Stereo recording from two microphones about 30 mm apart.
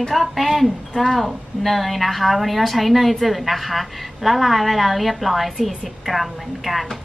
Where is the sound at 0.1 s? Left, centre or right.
Centre.